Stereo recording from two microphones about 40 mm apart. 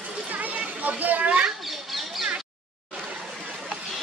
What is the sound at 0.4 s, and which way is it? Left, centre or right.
Children playing, right.